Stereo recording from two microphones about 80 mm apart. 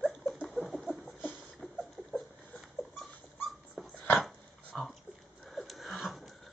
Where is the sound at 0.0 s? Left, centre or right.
Centre.